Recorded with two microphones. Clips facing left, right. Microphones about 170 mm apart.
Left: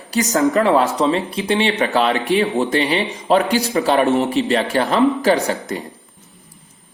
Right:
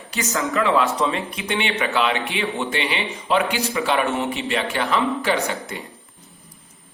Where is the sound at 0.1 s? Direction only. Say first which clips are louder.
Left 8 dB; 35° left (ahead or behind).